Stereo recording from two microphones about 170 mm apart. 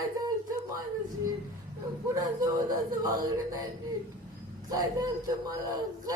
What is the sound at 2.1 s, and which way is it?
Speech, 20° right (ahead or behind).